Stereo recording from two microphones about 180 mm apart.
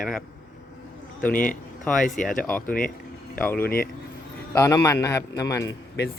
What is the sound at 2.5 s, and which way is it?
Speech, 10° left (ahead or behind).